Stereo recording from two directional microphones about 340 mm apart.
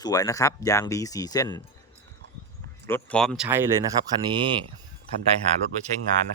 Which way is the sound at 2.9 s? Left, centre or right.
Centre.